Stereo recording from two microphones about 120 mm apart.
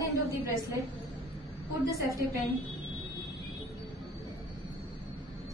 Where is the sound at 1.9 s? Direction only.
25° right (ahead or behind).